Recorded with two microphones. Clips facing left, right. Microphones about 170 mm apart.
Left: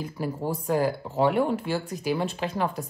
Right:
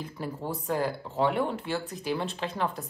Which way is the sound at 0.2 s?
5° left (ahead or behind).